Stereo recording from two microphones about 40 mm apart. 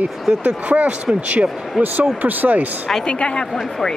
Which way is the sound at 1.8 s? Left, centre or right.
Right.